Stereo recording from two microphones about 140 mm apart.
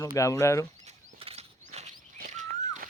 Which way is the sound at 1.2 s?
45° right (ahead or behind).